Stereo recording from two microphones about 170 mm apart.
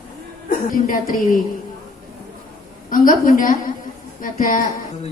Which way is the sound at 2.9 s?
55° left (ahead or behind).